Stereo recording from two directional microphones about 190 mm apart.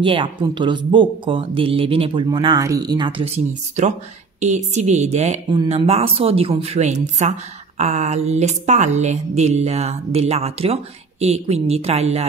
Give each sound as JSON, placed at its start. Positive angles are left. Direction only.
{"t": 0.0, "sound": "speech", "side_deg": -25}